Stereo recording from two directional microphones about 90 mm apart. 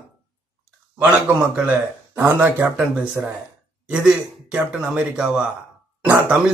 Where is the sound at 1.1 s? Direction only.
15° right (ahead or behind).